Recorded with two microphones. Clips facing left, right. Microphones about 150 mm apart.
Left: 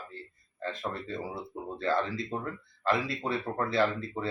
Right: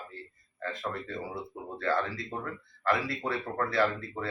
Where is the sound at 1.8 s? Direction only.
25° left (ahead or behind).